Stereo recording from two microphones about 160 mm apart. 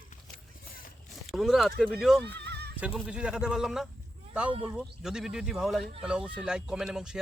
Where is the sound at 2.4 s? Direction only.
90° right.